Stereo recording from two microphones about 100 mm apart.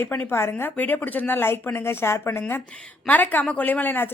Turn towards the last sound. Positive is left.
turn(degrees=20)  # may be behind; listen again after turning